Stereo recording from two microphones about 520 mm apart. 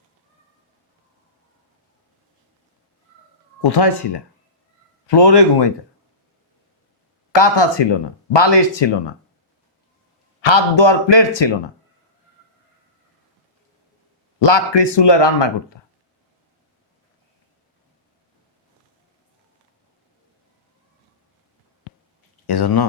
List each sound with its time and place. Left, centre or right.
3.6 s speech: left
7.3 s speech: left
10.4 s a man's voice: left
14.3 s speech: left
22.4 s speech: left